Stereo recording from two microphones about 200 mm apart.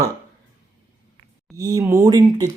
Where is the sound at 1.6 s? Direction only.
15° right (ahead or behind).